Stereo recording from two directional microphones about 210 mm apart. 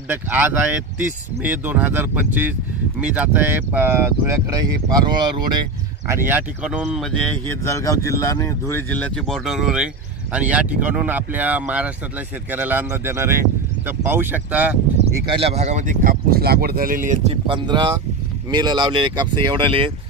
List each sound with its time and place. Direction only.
0.1 s speech: 10° right (ahead or behind)
15.2 s speech: 25° right (ahead or behind)